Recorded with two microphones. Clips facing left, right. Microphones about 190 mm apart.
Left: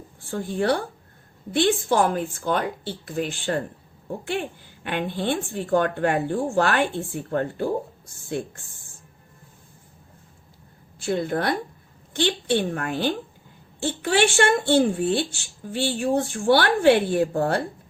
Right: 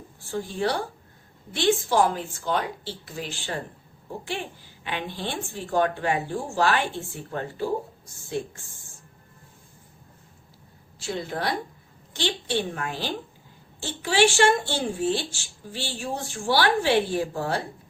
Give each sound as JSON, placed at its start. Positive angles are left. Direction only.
{"t": 0.2, "sound": "a woman's voice", "side_deg": 55}
{"t": 11.0, "sound": "speech", "side_deg": 55}